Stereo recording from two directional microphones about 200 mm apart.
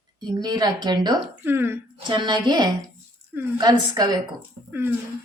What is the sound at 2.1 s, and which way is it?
A woman's voice, 20° right (ahead or behind).